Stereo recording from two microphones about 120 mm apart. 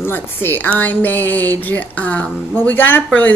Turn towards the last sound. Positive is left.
turn(degrees=15)  # may be behind; listen again after turning